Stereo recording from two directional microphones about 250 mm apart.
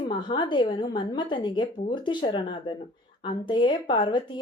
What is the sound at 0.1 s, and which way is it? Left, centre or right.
A woman's voice, centre.